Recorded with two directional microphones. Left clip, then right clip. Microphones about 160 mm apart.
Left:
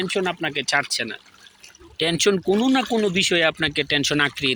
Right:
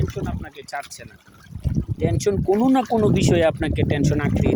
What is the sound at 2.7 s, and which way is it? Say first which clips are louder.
Speech: right 2 dB; 25° right (ahead or behind).